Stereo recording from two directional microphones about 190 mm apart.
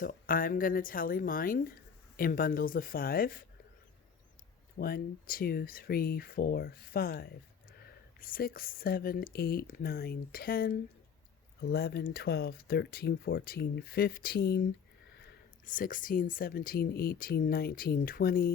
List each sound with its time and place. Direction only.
0.0 s speech: 50° left (ahead or behind)
4.8 s speech: 50° left (ahead or behind)
15.6 s speech: 45° left (ahead or behind)